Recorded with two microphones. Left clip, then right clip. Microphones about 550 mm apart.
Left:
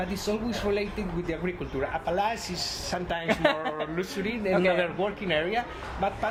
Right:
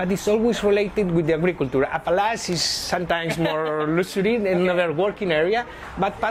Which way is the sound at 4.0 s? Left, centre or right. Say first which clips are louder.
Right 10 dB; right.